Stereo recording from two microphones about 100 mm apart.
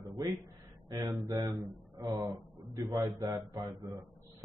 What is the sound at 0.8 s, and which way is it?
Speech, 40° right (ahead or behind).